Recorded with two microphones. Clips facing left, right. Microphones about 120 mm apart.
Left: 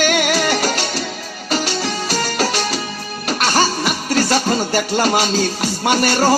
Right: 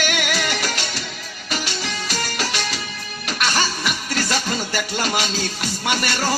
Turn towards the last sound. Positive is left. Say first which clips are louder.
# left 8 dB
turn(degrees=40)  # may be behind; listen again after turning